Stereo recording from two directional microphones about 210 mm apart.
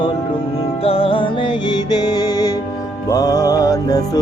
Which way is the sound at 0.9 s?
25° left (ahead or behind).